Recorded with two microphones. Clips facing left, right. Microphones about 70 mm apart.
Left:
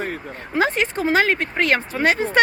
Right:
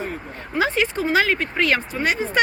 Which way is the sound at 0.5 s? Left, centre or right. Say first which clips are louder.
Left 1 dB; left.